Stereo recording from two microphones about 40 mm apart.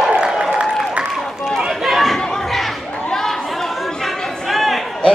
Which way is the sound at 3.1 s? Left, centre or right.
Centre.